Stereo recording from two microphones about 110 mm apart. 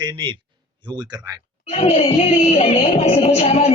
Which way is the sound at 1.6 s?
65° left (ahead or behind).